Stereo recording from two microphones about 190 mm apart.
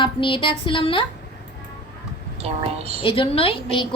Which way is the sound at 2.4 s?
30° right (ahead or behind).